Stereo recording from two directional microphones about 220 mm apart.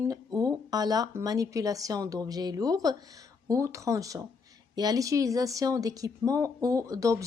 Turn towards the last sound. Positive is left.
turn(degrees=-15)  # may be behind; listen again after turning